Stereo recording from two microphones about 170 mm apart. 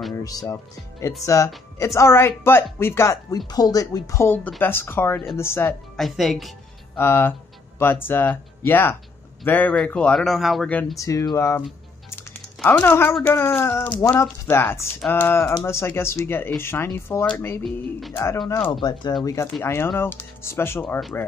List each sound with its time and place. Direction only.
0.1 s speech: 20° left (ahead or behind)
5.9 s a woman's voice: centre (ahead or behind)
7.0 s speech: 15° left (ahead or behind)
12.6 s speech: 15° left (ahead or behind)